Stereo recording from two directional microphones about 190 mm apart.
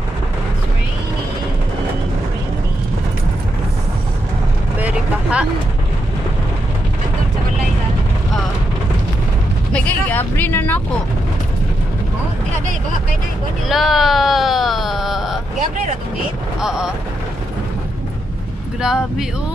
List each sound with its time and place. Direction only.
4.7 s vehicle: 5° right (ahead or behind)
9.7 s vehicle: 5° left (ahead or behind)
13.7 s speech: centre (ahead or behind)
16.6 s speech: 5° right (ahead or behind)
18.8 s speech: 5° right (ahead or behind)